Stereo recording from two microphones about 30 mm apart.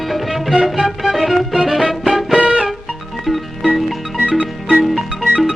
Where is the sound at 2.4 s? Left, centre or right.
Right.